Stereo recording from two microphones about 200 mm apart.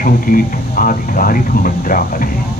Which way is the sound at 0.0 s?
45° left (ahead or behind).